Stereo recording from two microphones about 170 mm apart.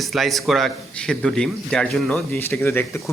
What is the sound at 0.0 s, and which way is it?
A man's voice, centre (ahead or behind).